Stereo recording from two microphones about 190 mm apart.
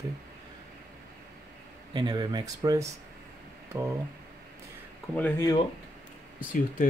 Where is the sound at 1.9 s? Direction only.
20° right (ahead or behind).